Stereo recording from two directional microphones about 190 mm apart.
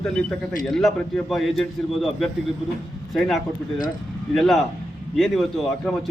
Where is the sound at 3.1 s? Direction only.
Centre (ahead or behind).